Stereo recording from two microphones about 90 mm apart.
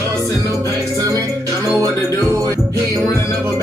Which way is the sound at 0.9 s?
35° right (ahead or behind).